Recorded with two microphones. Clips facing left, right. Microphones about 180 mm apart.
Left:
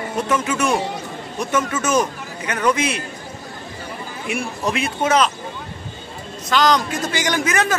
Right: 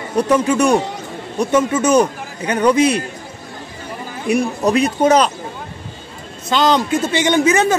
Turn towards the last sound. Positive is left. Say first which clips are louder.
# right 6 dB
turn(degrees=-25)  # may be behind; listen again after turning